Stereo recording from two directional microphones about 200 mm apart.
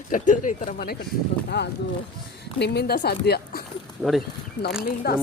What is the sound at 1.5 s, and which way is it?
A woman's voice, 60° left (ahead or behind).